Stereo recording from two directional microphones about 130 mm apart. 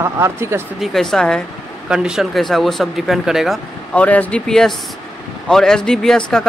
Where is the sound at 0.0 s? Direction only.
20° right (ahead or behind).